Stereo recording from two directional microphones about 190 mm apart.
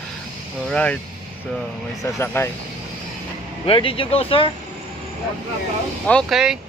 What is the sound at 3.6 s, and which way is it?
Speech, 30° left (ahead or behind).